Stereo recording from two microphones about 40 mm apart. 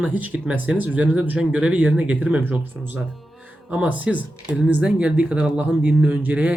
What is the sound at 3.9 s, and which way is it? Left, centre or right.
Speech, right.